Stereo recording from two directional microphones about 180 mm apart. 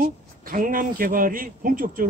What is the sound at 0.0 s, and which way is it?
A man's voice, 50° right (ahead or behind).